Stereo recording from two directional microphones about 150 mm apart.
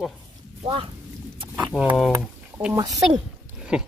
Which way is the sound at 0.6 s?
40° right (ahead or behind).